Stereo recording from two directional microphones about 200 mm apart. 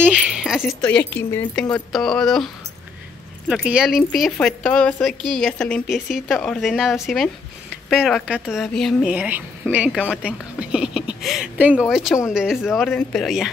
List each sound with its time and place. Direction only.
0.0 s speech: 5° right (ahead or behind)